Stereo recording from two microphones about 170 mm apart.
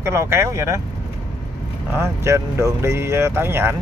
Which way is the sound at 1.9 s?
15° right (ahead or behind).